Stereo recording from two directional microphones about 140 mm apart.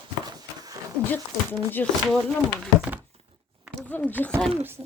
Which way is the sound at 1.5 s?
15° left (ahead or behind).